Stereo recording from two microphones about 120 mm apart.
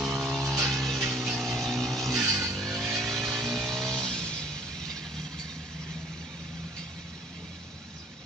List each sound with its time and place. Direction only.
0.0 s music: 10° right (ahead or behind)
2.2 s music: 15° right (ahead or behind)
2.6 s vehicle: centre (ahead or behind)